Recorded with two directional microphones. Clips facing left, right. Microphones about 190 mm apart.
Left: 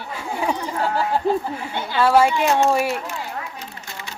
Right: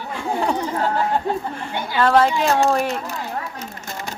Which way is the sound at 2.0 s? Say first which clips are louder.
Even; 10° left (ahead or behind).